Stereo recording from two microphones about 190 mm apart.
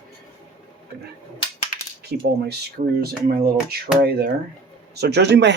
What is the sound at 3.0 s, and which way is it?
Speech, 55° right (ahead or behind).